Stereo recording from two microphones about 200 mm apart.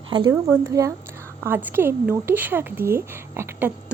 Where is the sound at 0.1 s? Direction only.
20° right (ahead or behind).